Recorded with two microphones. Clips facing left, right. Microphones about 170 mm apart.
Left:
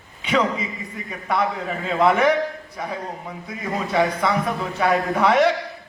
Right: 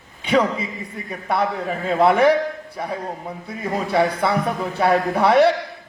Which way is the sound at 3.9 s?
30° right (ahead or behind).